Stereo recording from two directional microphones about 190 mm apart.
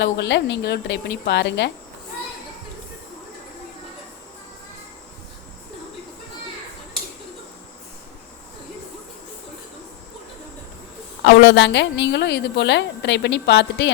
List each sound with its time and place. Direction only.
0.0 s a woman's voice: 65° left (ahead or behind)
11.2 s a woman's voice: 70° left (ahead or behind)